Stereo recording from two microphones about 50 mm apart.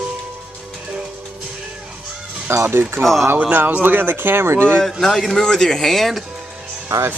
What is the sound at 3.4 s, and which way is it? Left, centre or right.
Speech, right.